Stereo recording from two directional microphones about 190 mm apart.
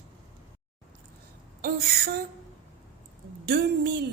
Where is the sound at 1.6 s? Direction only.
55° right (ahead or behind).